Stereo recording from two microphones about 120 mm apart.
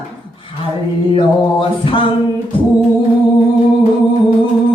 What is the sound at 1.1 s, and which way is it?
Female singing, 45° left (ahead or behind).